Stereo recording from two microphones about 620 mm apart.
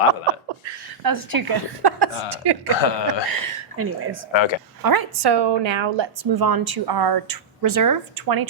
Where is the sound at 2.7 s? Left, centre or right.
Left.